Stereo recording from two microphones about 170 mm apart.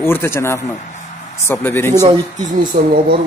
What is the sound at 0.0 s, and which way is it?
A man's voice, 15° left (ahead or behind).